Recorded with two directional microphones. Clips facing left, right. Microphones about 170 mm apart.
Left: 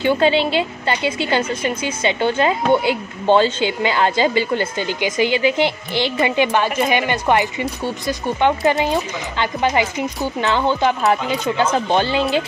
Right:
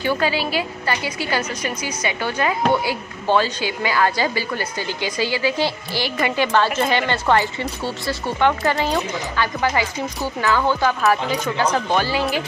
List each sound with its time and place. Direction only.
0.0 s a woman's voice: 25° left (ahead or behind)